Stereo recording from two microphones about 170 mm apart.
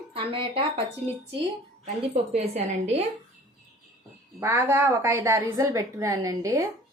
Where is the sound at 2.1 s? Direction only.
40° right (ahead or behind).